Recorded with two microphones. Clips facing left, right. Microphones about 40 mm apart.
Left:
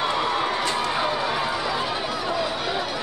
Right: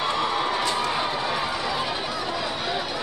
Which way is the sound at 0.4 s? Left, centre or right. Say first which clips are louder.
Even; centre.